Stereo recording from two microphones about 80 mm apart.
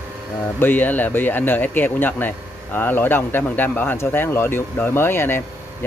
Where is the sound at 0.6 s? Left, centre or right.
Left.